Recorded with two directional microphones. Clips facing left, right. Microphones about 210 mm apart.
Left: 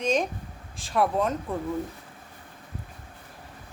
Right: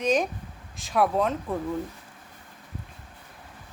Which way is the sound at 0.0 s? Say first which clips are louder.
Right 1 dB; centre (ahead or behind).